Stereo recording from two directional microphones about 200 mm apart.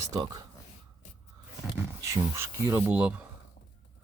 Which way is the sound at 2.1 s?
15° right (ahead or behind).